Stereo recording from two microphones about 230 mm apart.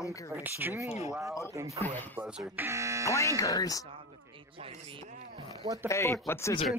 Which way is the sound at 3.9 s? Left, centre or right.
Right.